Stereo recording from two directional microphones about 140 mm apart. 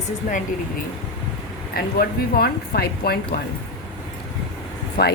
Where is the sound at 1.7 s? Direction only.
90° left.